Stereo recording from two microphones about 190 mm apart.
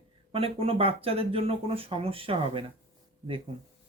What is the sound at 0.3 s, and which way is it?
Speech, 30° right (ahead or behind).